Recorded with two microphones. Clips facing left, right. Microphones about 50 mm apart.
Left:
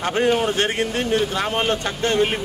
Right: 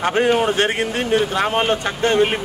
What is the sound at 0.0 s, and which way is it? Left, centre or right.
A man's voice, centre.